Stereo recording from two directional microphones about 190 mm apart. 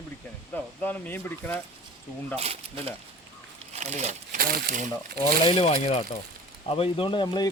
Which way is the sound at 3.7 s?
35° right (ahead or behind).